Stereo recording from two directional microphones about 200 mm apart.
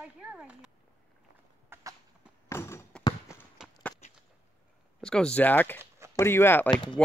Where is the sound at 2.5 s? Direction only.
15° left (ahead or behind).